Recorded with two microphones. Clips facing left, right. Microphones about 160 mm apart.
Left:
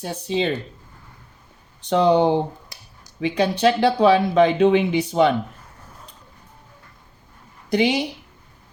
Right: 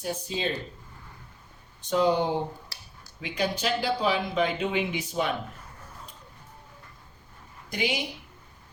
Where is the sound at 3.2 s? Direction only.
70° left (ahead or behind).